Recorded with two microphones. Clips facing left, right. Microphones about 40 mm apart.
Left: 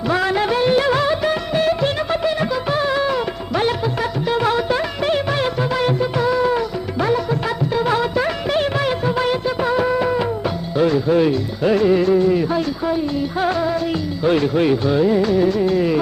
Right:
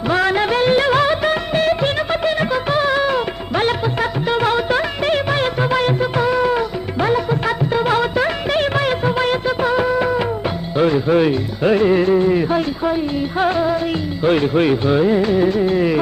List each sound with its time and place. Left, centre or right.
0.2 s music of bollywood: right
4.3 s music: right
9.6 s music of bollywood: right
10.2 s music: right
14.3 s speech: right